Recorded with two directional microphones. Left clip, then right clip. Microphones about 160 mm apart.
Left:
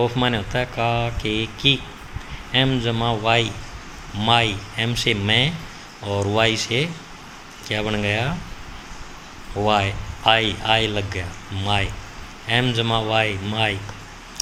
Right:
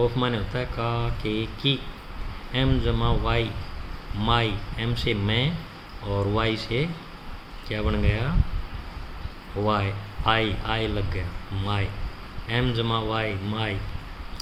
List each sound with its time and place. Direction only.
0.0 s speech: 20° left (ahead or behind)
9.6 s speech: 20° left (ahead or behind)